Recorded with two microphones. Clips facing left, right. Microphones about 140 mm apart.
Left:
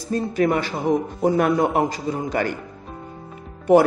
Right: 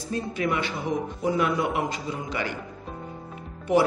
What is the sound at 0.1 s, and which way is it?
Speech, 40° left (ahead or behind).